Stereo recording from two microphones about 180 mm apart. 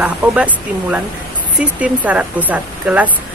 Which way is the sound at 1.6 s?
10° right (ahead or behind).